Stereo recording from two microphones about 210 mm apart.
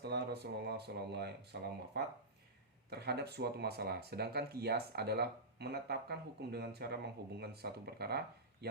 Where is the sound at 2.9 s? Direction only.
50° right (ahead or behind).